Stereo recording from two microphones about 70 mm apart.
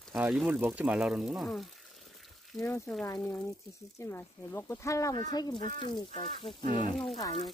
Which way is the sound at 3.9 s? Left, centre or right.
Left.